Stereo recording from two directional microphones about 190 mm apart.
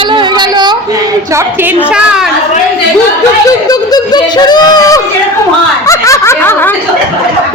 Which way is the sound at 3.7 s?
20° left (ahead or behind).